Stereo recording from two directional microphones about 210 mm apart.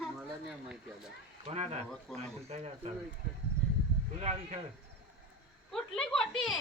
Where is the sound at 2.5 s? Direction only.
30° right (ahead or behind).